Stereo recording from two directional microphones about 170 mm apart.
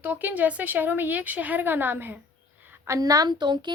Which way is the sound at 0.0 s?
10° right (ahead or behind).